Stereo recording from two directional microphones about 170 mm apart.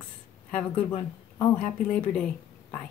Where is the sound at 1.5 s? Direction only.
5° left (ahead or behind).